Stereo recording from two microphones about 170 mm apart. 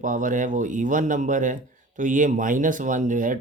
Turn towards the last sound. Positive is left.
turn(degrees=-50)  # may be behind; listen again after turning